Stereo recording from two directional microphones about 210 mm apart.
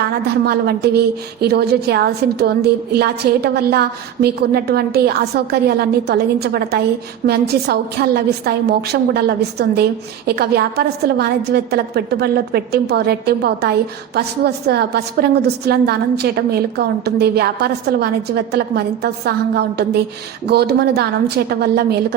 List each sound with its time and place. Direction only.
0.0 s a woman's voice: 50° right (ahead or behind)